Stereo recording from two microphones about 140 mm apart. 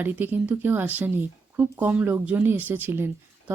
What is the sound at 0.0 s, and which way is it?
Speech, 15° right (ahead or behind).